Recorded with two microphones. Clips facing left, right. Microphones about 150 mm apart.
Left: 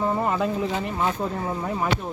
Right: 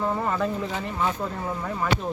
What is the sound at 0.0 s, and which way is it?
Speech, 15° left (ahead or behind).